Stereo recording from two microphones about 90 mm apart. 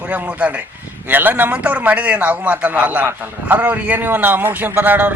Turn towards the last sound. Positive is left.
turn(degrees=-20)  # may be behind; listen again after turning